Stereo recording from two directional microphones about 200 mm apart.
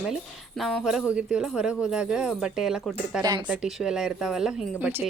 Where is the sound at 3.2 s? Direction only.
20° right (ahead or behind).